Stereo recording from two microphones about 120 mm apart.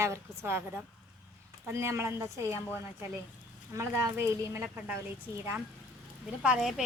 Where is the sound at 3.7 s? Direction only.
25° right (ahead or behind).